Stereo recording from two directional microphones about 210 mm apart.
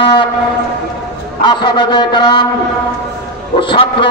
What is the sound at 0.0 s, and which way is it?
Speech, 25° left (ahead or behind).